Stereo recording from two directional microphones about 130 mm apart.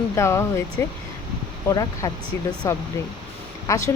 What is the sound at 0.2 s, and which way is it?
Speech, 20° left (ahead or behind).